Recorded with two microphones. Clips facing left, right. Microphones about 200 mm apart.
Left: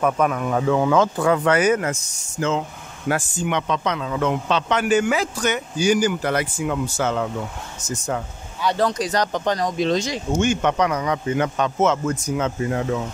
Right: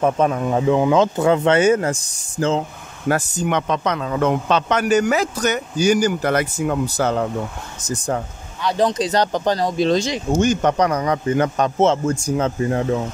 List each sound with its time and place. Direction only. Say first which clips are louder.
0.0 s a man's voice: right 2 dB; 30° right (ahead or behind)
8.7 s a man's voice: right 5 dB; 20° right (ahead or behind)